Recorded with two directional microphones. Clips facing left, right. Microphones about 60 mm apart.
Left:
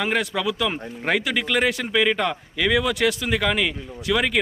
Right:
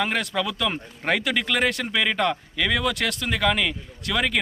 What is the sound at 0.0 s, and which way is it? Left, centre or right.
Speech, centre.